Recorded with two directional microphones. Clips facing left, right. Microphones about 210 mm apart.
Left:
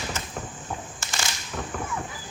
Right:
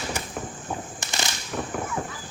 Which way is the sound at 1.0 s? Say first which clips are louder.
Right 2 dB; 20° right (ahead or behind).